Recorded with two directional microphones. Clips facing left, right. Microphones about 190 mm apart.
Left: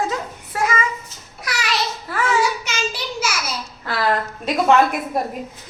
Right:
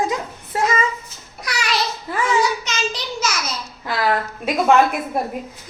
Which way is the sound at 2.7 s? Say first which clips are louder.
Right 1 dB; 10° left (ahead or behind).